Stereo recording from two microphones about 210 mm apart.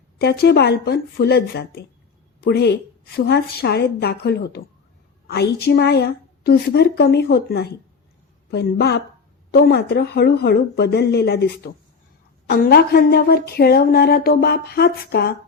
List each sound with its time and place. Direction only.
0.2 s speech: 50° left (ahead or behind)